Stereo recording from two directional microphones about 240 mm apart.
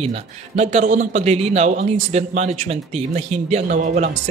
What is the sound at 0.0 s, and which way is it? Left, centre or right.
A man's voice, right.